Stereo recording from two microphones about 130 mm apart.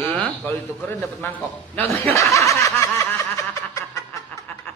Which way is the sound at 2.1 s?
25° left (ahead or behind).